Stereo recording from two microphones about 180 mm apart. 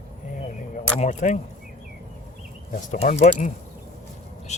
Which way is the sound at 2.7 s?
45° left (ahead or behind).